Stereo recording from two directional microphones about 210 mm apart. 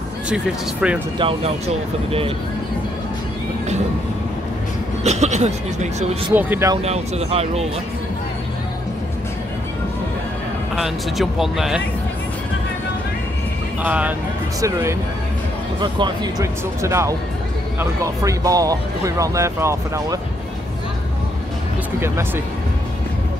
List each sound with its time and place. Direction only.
0.3 s speech: 5° right (ahead or behind)
1.1 s speech: 25° right (ahead or behind)
5.0 s speech: 30° right (ahead or behind)
6.3 s speech: 10° right (ahead or behind)
6.8 s speech: 30° right (ahead or behind)
10.8 s speech: centre (ahead or behind)
13.8 s speech: 5° right (ahead or behind)